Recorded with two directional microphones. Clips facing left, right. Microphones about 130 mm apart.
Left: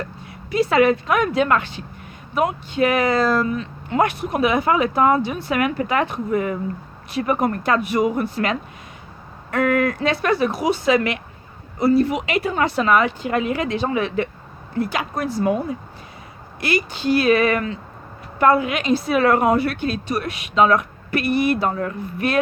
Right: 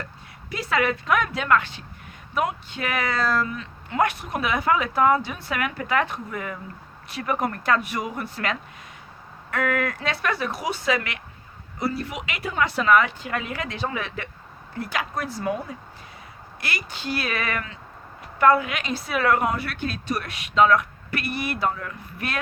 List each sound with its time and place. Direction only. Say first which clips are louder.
0.5 s speech: left 8 dB; 25° left (ahead or behind)
21.7 s speech: left 6 dB; 35° left (ahead or behind)